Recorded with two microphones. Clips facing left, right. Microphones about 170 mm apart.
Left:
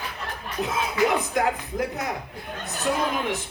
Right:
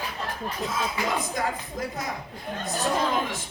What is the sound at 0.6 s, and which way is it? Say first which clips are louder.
A man's voice: left 6 dB; 65° left (ahead or behind).